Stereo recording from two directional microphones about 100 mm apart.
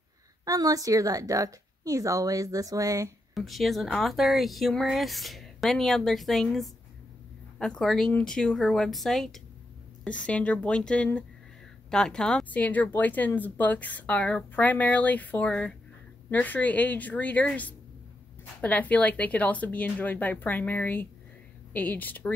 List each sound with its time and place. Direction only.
0.5 s a woman's voice: 35° right (ahead or behind)
3.3 s a woman's voice: centre (ahead or behind); by 22.3 s 15° left (ahead or behind)